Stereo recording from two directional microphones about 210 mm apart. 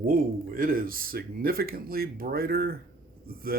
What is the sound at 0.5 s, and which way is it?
Speech, 45° right (ahead or behind).